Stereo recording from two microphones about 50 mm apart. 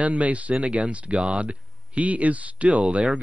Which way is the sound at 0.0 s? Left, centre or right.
Right.